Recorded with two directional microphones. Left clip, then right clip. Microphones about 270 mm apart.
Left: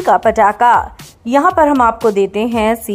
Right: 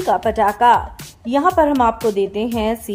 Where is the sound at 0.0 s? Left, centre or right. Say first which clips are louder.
Left 6 dB; centre.